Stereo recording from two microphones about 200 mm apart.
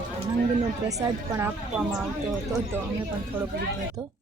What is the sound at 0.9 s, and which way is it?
A woman's voice, 15° right (ahead or behind).